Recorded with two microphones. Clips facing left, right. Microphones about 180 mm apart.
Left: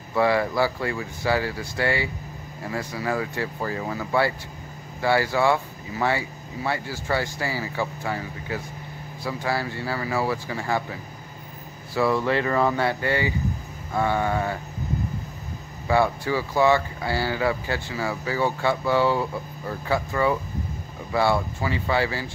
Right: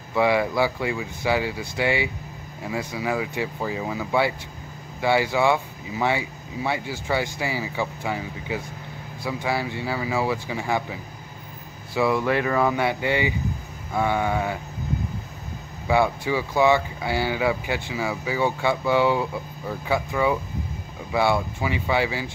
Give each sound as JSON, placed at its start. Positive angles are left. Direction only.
{"t": 0.1, "sound": "speech", "side_deg": -15}
{"t": 15.9, "sound": "speech", "side_deg": -15}